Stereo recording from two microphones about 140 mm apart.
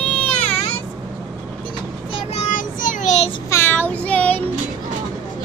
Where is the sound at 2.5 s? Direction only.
70° left (ahead or behind); by 3.3 s 55° left (ahead or behind).